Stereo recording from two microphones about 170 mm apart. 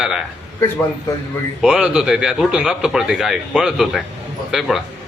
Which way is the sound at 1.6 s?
5° right (ahead or behind).